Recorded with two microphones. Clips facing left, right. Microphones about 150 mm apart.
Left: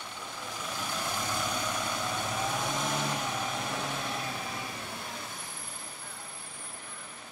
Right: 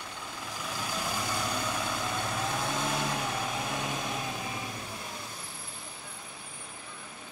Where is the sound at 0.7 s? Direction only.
5° right (ahead or behind).